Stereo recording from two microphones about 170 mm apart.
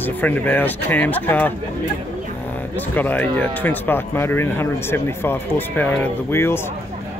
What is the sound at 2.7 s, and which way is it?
Speech, 10° left (ahead or behind).